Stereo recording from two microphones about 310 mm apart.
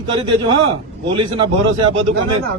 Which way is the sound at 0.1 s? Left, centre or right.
Centre.